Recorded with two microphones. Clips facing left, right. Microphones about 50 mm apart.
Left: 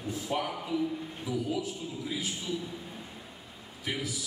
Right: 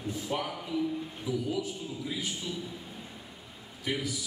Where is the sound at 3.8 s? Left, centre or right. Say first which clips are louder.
Right 2 dB; centre.